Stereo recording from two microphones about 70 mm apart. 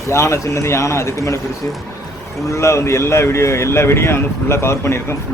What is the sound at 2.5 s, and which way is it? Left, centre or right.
A man's voice, left.